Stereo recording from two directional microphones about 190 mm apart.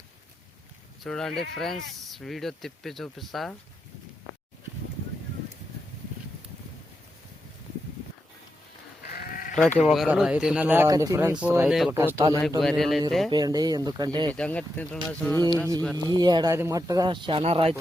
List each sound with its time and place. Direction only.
1.0 s speech: centre (ahead or behind)
9.1 s sheep: 50° left (ahead or behind)
9.6 s speech: 5° left (ahead or behind)
11.9 s speech: 15° right (ahead or behind)
12.4 s speech: centre (ahead or behind)
13.3 s speech: 20° right (ahead or behind)
14.3 s speech: 5° left (ahead or behind)
16.0 s speech: 20° right (ahead or behind)